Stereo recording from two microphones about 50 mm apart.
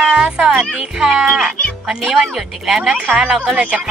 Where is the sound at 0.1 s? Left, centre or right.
Centre.